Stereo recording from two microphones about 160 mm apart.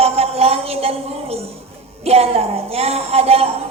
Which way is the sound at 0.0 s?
40° right (ahead or behind).